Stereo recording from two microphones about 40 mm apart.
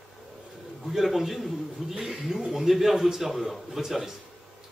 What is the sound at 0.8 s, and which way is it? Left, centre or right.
A man's voice, centre.